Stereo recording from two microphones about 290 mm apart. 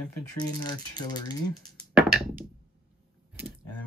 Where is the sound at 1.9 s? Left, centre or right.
Centre.